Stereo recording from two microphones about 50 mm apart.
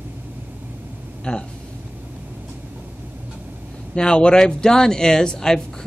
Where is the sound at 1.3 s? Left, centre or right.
Left.